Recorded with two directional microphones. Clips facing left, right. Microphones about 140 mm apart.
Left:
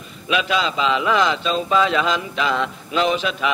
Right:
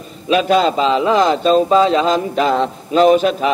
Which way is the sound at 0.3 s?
40° right (ahead or behind).